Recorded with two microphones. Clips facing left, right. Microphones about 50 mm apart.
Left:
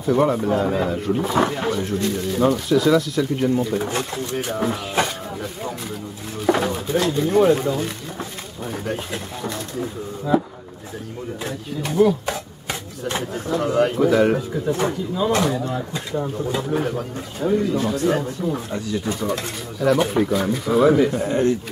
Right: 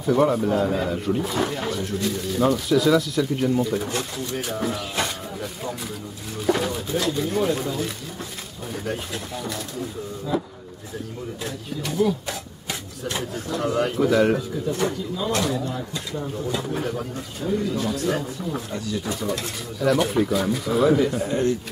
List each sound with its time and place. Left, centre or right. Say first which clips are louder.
0.0 s speech: left 1 dB; centre
5.0 s a sound: left 2 dB; centre
6.4 s speech: left 3 dB; centre
9.8 s speech: left 3 dB; left
11.4 s speech: left 3 dB; centre
12.3 s rub: left 4 dB; left
13.2 s speech: left 3 dB; centre
14.7 s speech: left 3 dB; left
17.9 s speech: left 4 dB; centre